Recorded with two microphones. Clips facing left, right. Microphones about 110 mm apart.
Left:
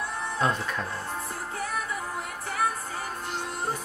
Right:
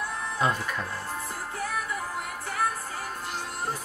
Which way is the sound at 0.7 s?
Centre (ahead or behind).